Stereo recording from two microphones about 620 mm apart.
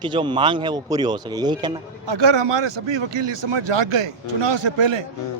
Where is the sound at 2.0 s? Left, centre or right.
Right.